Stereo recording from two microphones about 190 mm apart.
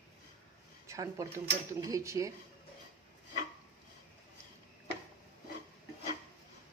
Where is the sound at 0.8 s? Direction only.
15° right (ahead or behind).